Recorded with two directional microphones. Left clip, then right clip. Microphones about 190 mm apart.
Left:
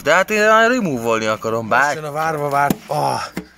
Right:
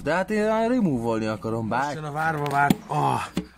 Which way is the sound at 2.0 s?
40° left (ahead or behind).